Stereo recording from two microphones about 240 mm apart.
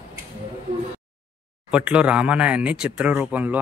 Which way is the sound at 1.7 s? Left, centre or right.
Centre.